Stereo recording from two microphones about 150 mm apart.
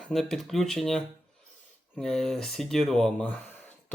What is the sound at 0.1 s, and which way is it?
Speech, centre (ahead or behind).